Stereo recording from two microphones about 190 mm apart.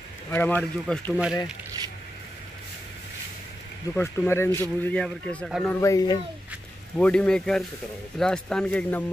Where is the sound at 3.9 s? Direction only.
10° left (ahead or behind); by 5.7 s 5° right (ahead or behind).